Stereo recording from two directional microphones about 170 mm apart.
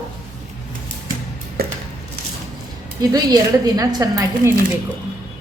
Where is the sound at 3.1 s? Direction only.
20° right (ahead or behind).